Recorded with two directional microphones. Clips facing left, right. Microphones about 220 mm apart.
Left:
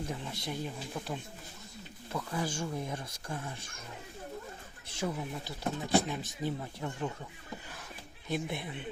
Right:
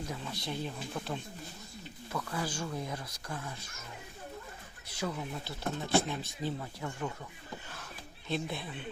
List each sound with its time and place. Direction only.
0.2 s speech: 20° left (ahead or behind)
0.6 s speech: 10° left (ahead or behind)
2.1 s speech: 20° left (ahead or behind)
2.6 s speech: 10° left (ahead or behind)
2.8 s speech: 25° left (ahead or behind)
5.1 s speech: 15° left (ahead or behind)
8.3 s speech: 20° left (ahead or behind)